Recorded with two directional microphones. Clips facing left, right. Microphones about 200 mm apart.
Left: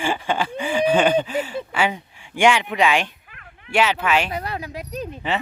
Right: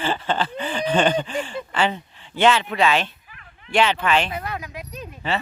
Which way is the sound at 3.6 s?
10° left (ahead or behind).